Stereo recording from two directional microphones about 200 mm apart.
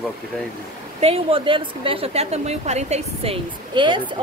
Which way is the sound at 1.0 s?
30° right (ahead or behind).